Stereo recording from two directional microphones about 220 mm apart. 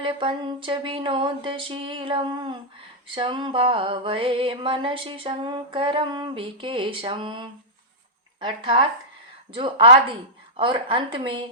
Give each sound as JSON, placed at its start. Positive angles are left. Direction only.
{"t": 0.0, "sound": "music", "side_deg": -25}